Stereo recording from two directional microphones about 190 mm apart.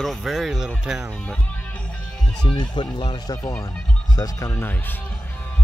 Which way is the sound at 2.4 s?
25° left (ahead or behind).